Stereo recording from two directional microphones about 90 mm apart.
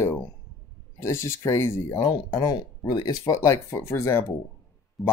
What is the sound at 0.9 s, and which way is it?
Speech, 30° left (ahead or behind).